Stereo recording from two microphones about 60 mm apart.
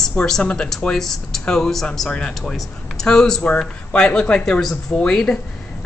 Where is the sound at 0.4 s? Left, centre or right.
Left.